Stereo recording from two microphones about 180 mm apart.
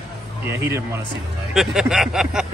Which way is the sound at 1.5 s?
5° right (ahead or behind).